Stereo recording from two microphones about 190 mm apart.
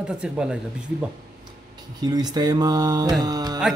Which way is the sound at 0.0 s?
5° right (ahead or behind).